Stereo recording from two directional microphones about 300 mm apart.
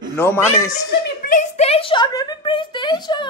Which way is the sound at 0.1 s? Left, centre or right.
Centre.